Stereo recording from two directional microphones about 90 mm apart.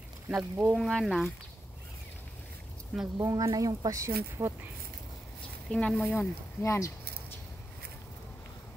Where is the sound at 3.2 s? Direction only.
40° right (ahead or behind).